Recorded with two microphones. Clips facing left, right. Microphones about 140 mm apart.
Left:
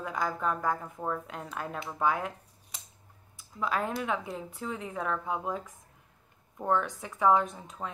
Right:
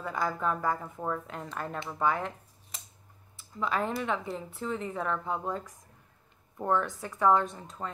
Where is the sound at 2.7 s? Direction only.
Centre (ahead or behind).